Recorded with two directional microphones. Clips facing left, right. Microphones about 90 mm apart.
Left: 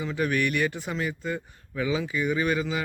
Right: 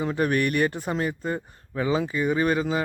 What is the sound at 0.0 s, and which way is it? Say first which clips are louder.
A man's voice: right 3 dB; 45° right (ahead or behind).